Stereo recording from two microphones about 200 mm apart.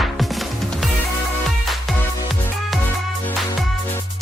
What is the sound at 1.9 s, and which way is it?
Music, centre (ahead or behind).